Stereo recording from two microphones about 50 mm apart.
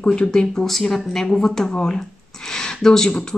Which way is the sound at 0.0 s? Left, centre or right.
Centre.